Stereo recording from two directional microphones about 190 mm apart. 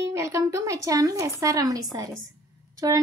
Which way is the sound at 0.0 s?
15° right (ahead or behind).